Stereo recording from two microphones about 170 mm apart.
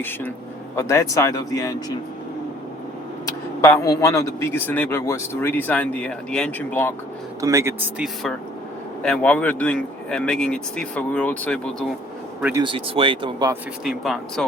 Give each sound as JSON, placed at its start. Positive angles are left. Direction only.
{"t": 0.8, "sound": "speech", "side_deg": 15}
{"t": 3.2, "sound": "a man's voice", "side_deg": 15}
{"t": 7.4, "sound": "speech", "side_deg": -15}
{"t": 9.0, "sound": "a man's voice", "side_deg": 5}
{"t": 12.4, "sound": "speech", "side_deg": -10}
{"t": 12.6, "sound": "speech", "side_deg": -30}
{"t": 13.8, "sound": "speech", "side_deg": 0}